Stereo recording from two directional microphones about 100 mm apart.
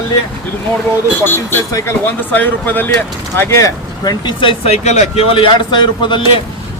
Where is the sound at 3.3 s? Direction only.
30° left (ahead or behind).